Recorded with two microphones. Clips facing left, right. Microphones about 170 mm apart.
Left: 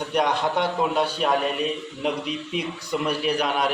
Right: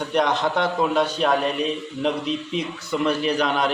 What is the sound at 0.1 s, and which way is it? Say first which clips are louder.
Speech: right 1 dB; 10° left (ahead or behind).